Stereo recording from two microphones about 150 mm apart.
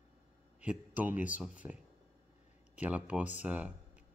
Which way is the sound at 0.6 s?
10° right (ahead or behind).